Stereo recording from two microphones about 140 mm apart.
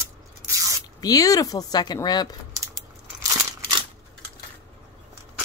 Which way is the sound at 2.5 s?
20° right (ahead or behind).